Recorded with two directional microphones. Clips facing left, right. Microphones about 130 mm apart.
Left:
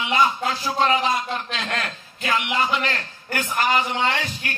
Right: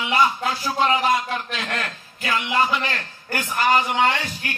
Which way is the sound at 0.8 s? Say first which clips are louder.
Right 2 dB; 20° right (ahead or behind).